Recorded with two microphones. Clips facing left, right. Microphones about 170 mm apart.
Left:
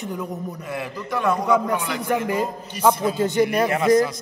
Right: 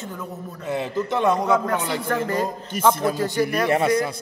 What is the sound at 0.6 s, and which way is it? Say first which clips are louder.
Speech: right 8 dB; 25° right (ahead or behind).